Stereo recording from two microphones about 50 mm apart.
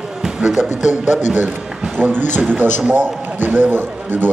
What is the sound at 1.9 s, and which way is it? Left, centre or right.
A man's voice, right.